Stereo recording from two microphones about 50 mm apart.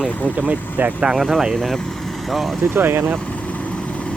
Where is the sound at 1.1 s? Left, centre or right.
Centre.